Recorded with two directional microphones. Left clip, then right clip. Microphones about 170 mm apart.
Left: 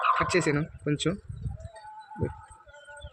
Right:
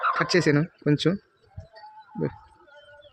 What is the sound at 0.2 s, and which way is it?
Speech, 90° right.